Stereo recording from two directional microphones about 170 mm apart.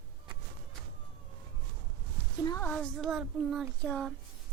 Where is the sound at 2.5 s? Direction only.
20° left (ahead or behind).